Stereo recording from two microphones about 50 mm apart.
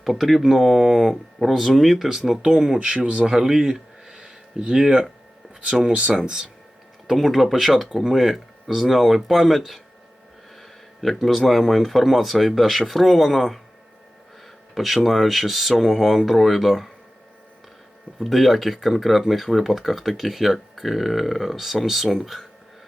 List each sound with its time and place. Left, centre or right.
0.0 s speech: centre
7.1 s speech: centre
14.8 s speech: centre
18.2 s speech: centre